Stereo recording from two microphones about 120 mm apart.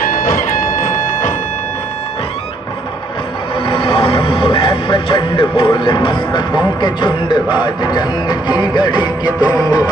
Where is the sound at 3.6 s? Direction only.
45° left (ahead or behind).